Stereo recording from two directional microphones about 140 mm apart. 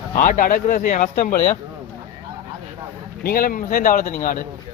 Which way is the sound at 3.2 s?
90° left.